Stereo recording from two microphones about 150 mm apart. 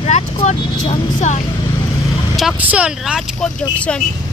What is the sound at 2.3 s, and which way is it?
Speech, 5° right (ahead or behind).